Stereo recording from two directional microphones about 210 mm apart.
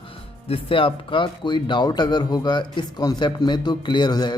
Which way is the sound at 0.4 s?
25° left (ahead or behind).